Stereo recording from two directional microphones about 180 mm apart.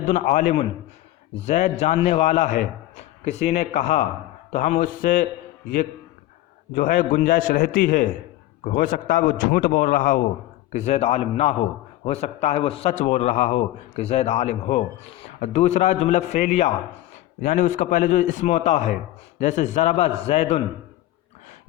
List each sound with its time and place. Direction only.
0.0 s a man's voice: 45° left (ahead or behind)
6.7 s a man's voice: 50° left (ahead or behind)
10.7 s a man's voice: 40° left (ahead or behind)